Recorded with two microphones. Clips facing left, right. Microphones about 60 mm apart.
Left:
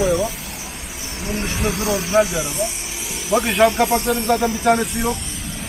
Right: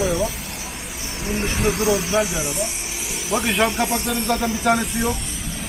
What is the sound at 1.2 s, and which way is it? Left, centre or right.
Speech, centre.